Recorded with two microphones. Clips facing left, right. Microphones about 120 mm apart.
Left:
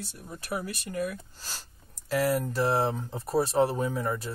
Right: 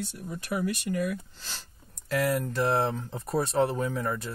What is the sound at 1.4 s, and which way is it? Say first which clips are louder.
Speech: even; 40° left (ahead or behind).